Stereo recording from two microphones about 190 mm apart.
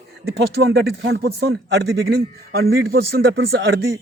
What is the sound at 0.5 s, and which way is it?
A man's voice, 60° right (ahead or behind).